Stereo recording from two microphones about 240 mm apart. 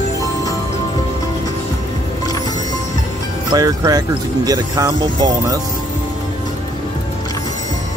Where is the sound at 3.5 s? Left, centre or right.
Centre.